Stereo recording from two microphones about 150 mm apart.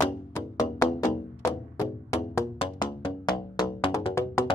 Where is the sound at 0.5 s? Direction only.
25° left (ahead or behind).